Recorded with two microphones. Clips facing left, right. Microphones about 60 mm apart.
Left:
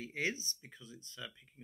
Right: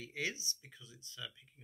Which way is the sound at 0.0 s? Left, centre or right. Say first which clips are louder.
Left 3 dB; left.